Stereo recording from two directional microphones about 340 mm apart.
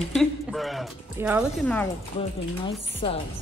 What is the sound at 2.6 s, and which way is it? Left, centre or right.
Speech, centre.